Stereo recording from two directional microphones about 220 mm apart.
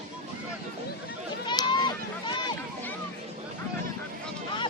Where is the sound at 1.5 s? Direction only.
20° left (ahead or behind).